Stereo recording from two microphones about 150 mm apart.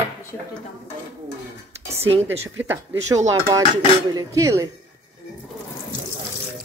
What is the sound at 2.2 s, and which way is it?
Speech, 15° right (ahead or behind).